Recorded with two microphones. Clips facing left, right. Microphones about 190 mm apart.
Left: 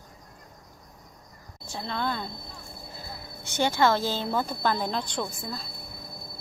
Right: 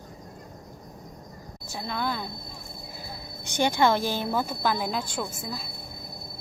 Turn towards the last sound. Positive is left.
turn(degrees=-10)  # may be behind; listen again after turning